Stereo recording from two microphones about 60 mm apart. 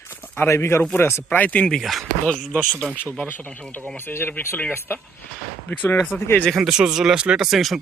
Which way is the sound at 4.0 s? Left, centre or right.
Left.